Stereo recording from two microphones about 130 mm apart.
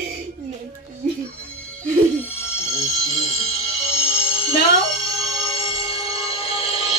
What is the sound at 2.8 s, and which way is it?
Music, 55° left (ahead or behind).